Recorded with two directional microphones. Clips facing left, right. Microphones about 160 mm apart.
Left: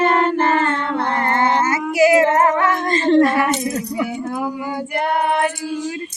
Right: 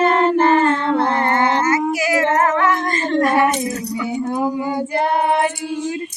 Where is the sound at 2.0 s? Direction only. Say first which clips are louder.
Left 4 dB; 25° left (ahead or behind).